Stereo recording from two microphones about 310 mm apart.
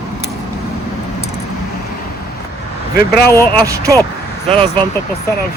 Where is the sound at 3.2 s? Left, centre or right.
Centre.